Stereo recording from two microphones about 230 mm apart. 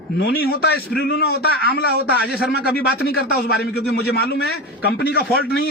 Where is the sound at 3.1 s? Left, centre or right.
Left.